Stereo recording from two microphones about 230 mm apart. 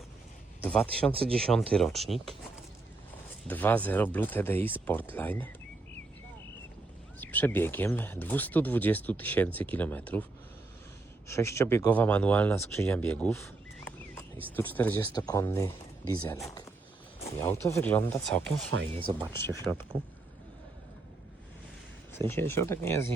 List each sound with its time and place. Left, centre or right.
0.6 s speech: centre
3.4 s speech: centre
7.2 s speech: centre
11.3 s speech: centre
18.7 s speech: right
19.3 s speech: centre
22.3 s speech: centre